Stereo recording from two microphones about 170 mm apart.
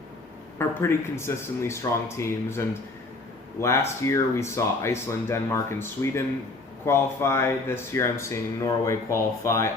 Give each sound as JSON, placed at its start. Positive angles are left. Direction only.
{"t": 0.6, "sound": "speech", "side_deg": 15}